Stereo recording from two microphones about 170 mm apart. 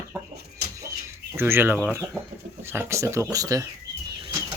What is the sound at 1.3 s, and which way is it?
Speech, 15° right (ahead or behind).